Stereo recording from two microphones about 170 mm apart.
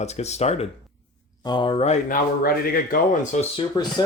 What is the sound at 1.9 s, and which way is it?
Speech, 55° left (ahead or behind).